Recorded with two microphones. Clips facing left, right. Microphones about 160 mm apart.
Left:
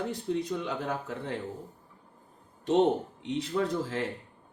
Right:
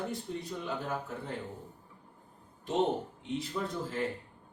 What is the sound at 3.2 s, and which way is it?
Speech, 90° left.